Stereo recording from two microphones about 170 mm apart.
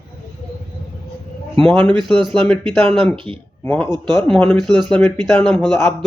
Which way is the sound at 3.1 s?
30° right (ahead or behind).